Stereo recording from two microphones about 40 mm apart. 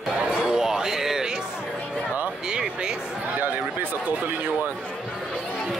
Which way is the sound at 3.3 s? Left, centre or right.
Right.